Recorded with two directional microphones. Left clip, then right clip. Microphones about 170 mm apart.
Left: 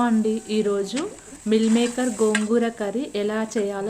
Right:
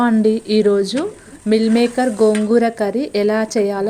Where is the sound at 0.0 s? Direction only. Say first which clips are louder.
Right 7 dB; 45° right (ahead or behind).